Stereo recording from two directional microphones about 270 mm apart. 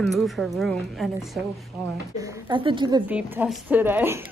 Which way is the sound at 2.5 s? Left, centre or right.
Centre.